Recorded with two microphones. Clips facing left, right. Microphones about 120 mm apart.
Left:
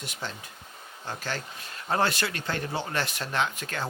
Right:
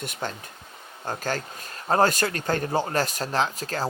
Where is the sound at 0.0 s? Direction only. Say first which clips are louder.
Right 5 dB; 50° right (ahead or behind).